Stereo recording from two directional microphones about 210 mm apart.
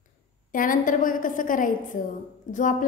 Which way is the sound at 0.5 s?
40° left (ahead or behind).